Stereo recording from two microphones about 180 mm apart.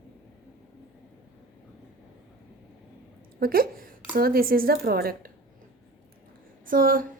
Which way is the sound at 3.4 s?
55° right (ahead or behind).